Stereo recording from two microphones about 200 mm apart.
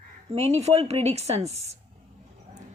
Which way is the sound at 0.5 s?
30° right (ahead or behind).